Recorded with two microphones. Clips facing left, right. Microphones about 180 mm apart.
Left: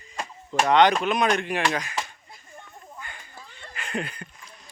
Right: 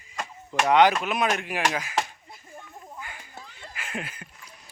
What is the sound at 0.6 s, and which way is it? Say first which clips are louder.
Speech: left 1 dB; 5° right (ahead or behind).